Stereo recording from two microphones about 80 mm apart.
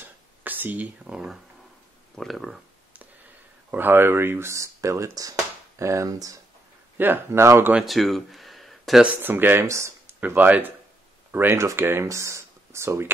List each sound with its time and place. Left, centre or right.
0.0 s a sound: right
2.1 s speech: centre
3.7 s speech: right
7.0 s speech: right
7.8 s speech: centre
9.0 s speech: right
9.7 s speech: right